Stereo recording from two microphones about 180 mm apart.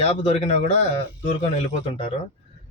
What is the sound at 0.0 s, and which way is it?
A man's voice, 35° left (ahead or behind).